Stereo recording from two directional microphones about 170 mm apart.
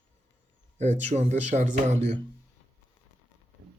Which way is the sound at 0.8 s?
45° right (ahead or behind).